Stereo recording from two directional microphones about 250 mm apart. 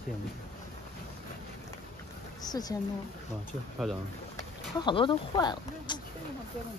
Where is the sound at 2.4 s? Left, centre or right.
Centre.